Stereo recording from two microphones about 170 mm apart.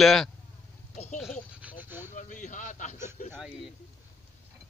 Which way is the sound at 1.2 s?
5° right (ahead or behind).